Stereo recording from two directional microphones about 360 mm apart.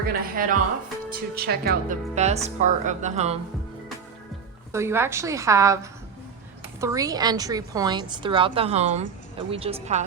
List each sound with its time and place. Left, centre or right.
0.1 s speech: right
4.7 s a woman's voice: centre